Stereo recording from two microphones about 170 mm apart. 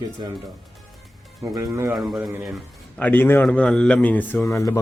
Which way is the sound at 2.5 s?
10° left (ahead or behind).